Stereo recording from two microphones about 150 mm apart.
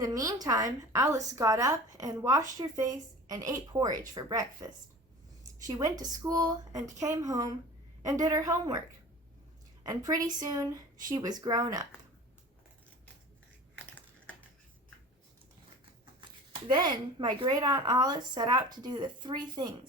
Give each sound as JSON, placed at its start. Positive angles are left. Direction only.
{"t": 0.0, "sound": "a woman's voice", "side_deg": -25}
{"t": 9.8, "sound": "a woman's voice", "side_deg": -20}
{"t": 16.6, "sound": "a woman's voice", "side_deg": -30}